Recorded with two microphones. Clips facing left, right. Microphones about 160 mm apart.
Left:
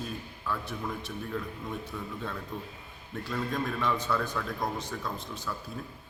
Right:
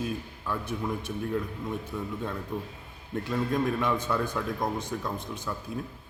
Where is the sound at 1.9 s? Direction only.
10° right (ahead or behind).